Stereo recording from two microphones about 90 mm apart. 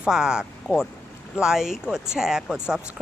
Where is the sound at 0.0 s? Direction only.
10° right (ahead or behind).